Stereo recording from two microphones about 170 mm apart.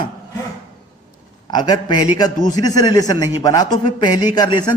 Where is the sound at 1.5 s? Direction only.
25° left (ahead or behind).